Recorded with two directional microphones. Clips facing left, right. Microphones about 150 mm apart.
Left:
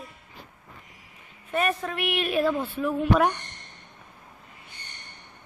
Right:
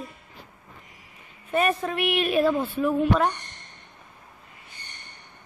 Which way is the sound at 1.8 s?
5° right (ahead or behind).